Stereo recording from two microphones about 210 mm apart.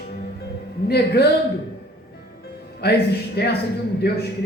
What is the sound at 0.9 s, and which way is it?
Speech, 50° left (ahead or behind).